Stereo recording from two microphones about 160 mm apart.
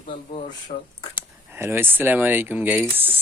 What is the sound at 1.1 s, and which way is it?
Speech, 15° right (ahead or behind).